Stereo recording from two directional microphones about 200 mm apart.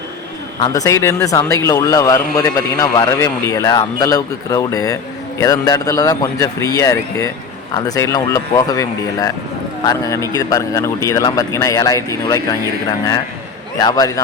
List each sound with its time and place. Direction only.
0.6 s speech: 15° left (ahead or behind)
13.7 s a man's voice: 20° left (ahead or behind)